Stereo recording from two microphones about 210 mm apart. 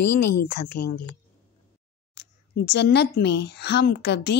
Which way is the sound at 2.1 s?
50° left (ahead or behind).